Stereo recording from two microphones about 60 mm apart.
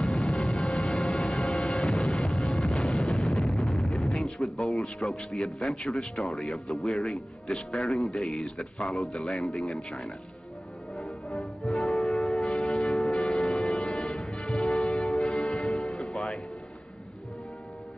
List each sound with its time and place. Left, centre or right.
0.0 s music: centre
0.7 s music: centre
2.0 s music: centre
3.1 s a sound: centre
6.2 s speech: centre
7.4 s speech: centre
7.9 s speech: centre
11.0 s music: centre